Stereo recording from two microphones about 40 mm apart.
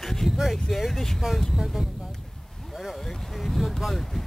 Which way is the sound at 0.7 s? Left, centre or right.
Centre.